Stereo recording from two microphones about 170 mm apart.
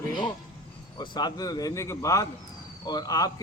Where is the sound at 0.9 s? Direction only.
25° left (ahead or behind).